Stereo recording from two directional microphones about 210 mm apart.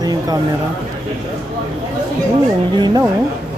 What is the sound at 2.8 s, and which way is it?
Speech, 20° right (ahead or behind).